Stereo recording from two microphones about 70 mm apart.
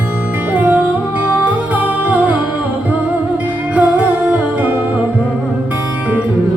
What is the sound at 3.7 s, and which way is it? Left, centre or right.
Music, centre.